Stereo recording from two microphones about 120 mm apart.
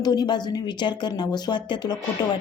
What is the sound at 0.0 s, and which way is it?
Speech, 35° left (ahead or behind).